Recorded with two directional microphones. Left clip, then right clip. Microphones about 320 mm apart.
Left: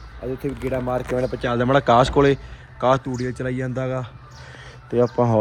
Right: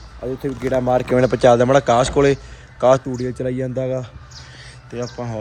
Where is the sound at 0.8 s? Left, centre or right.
Right.